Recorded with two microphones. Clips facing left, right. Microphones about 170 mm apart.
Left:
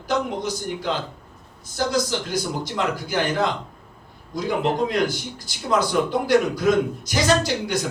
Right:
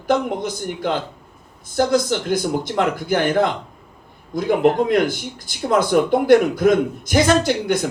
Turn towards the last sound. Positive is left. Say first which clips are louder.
# right 4 dB
turn(degrees=-55)  # may be behind; listen again after turning